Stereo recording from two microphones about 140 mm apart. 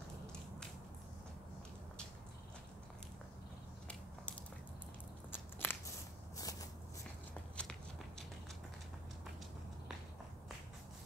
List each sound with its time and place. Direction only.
5.3 s biting: 15° left (ahead or behind)
6.3 s a sound: 25° left (ahead or behind)
7.6 s biting: 10° left (ahead or behind)